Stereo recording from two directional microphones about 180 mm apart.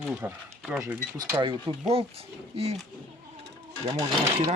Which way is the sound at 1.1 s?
20° right (ahead or behind).